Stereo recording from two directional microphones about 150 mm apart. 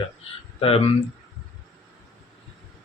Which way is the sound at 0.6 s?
40° left (ahead or behind).